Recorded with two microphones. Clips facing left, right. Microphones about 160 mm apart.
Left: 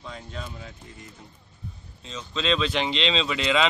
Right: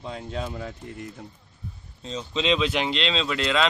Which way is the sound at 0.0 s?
35° right (ahead or behind).